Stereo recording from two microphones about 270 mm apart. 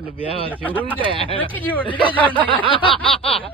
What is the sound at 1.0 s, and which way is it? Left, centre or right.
Speech, centre.